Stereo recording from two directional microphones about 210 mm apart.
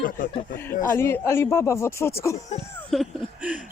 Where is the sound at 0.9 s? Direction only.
10° left (ahead or behind).